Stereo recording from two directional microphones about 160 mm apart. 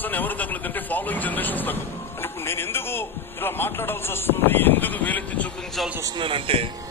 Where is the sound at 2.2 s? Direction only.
15° left (ahead or behind).